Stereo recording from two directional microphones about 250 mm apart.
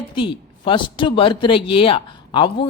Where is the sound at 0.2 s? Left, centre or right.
Centre.